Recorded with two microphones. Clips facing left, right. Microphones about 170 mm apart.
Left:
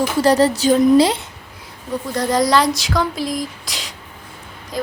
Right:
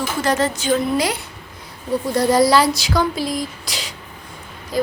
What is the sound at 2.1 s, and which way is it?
Speech, 10° right (ahead or behind).